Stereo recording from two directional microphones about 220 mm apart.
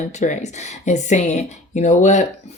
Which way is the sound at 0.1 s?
35° left (ahead or behind).